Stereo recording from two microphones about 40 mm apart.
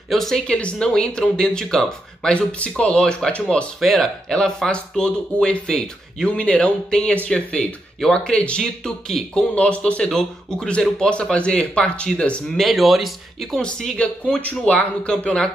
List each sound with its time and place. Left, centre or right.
0.1 s speech: centre
0.5 s speech: left
0.7 s speech: centre
2.3 s a man's voice: left
3.2 s speech: centre
4.3 s speech: centre
5.7 s speech: centre
6.2 s a man's voice: left
6.9 s speech: centre
10.1 s speech: centre
12.4 s speech: centre
13.6 s a man's voice: left